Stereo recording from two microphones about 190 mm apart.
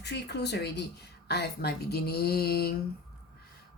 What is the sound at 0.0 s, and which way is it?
Speech, 60° left (ahead or behind).